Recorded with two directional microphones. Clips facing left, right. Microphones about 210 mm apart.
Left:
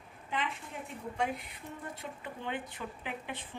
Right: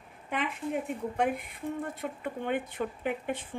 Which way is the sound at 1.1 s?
55° right (ahead or behind).